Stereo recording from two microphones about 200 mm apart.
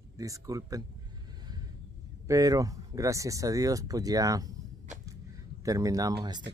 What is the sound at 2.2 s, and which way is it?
Speech, 15° right (ahead or behind).